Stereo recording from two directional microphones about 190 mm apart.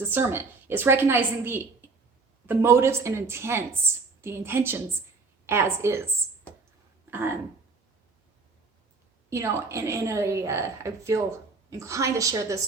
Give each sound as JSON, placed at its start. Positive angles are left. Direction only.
{"t": 0.0, "sound": "a woman's voice", "side_deg": -10}
{"t": 7.1, "sound": "speech", "side_deg": -10}
{"t": 9.3, "sound": "a woman's voice", "side_deg": -15}